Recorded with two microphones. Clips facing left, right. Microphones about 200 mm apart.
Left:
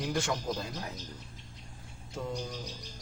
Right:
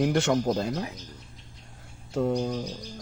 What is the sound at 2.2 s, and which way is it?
Music, 60° right (ahead or behind).